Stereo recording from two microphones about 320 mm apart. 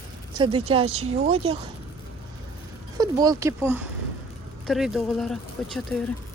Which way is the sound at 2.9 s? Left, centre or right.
Centre.